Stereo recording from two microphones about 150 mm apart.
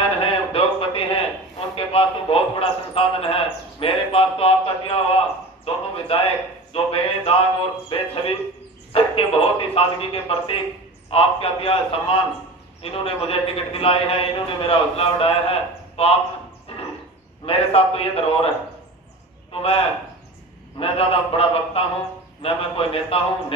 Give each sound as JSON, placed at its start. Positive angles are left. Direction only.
{"t": 0.2, "sound": "a sound", "side_deg": 40}
{"t": 1.8, "sound": "a man's voice", "side_deg": 40}
{"t": 16.7, "sound": "a sound", "side_deg": 40}
{"t": 17.5, "sound": "a man's voice", "side_deg": 40}
{"t": 19.5, "sound": "a man's voice", "side_deg": 40}
{"t": 20.8, "sound": "a man's voice", "side_deg": 40}